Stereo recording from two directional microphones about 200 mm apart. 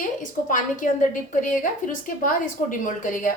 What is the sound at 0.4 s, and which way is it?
A woman's voice, 40° left (ahead or behind).